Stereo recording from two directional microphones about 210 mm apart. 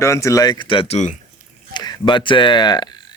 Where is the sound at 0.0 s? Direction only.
15° left (ahead or behind).